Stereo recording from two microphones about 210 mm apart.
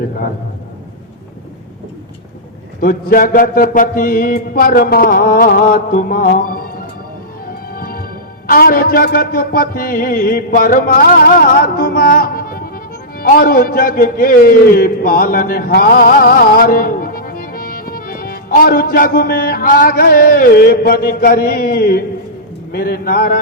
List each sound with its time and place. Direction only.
2.8 s a man's voice: 45° left (ahead or behind)
7.7 s music: 45° left (ahead or behind)
8.4 s a man's voice: 45° left (ahead or behind)